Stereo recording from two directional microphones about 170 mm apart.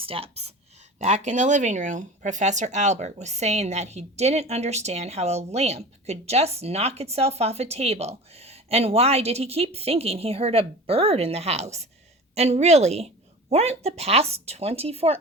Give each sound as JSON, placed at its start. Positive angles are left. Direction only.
{"t": 0.0, "sound": "speech", "side_deg": -35}